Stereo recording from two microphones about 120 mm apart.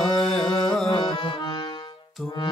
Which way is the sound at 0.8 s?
45° left (ahead or behind).